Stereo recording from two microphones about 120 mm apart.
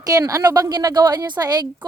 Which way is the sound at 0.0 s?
30° right (ahead or behind).